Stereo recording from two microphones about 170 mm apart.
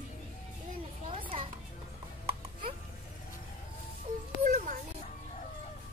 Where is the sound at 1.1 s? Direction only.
30° right (ahead or behind).